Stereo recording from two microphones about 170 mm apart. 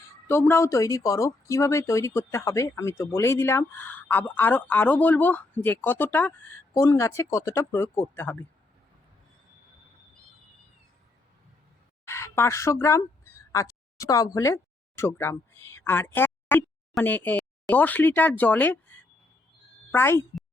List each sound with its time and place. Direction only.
0.3 s speech: 15° left (ahead or behind)
12.0 s speech: 15° left (ahead or behind)
13.5 s a sound: 20° left (ahead or behind)
14.3 s speech: 15° left (ahead or behind)